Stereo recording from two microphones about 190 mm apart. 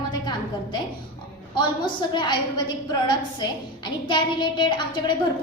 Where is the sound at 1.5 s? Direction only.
25° left (ahead or behind).